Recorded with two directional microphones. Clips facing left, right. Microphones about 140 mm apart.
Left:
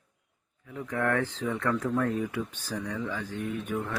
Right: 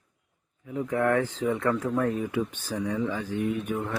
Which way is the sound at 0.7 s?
20° right (ahead or behind).